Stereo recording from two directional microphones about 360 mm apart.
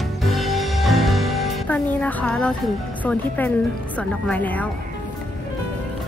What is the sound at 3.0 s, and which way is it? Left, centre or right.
A woman's voice, centre.